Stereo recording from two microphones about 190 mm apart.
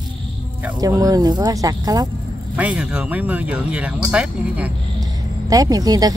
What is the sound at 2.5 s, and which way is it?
Speech, 5° right (ahead or behind).